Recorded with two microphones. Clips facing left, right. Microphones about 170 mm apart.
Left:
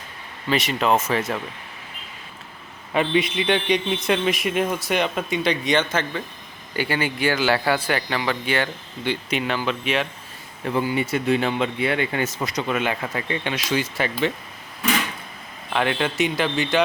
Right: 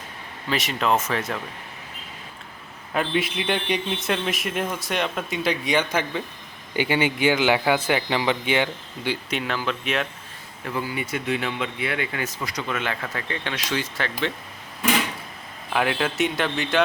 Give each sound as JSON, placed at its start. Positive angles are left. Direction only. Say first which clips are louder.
{"t": 0.5, "sound": "a man's voice", "louder": "left 2 dB", "side_deg": 0}
{"t": 2.9, "sound": "a man's voice", "louder": "left 3 dB", "side_deg": 0}
{"t": 9.3, "sound": "a man's voice", "louder": "left 4 dB", "side_deg": 0}
{"t": 10.7, "sound": "speech", "louder": "left 6 dB", "side_deg": 25}
{"t": 15.7, "sound": "a man's voice", "louder": "left 1 dB", "side_deg": -5}